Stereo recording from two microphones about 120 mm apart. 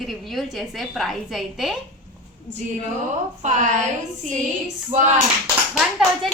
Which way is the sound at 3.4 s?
85° right.